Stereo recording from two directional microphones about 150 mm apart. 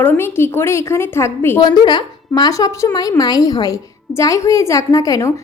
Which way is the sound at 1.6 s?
30° left (ahead or behind).